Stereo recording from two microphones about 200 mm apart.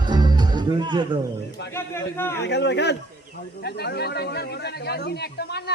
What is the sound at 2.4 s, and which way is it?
Speech, 60° left (ahead or behind).